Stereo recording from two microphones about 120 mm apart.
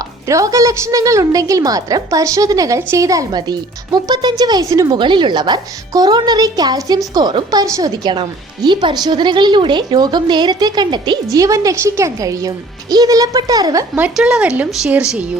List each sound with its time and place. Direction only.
0.3 s a woman's voice: 25° right (ahead or behind)
14.2 s speech: 5° right (ahead or behind)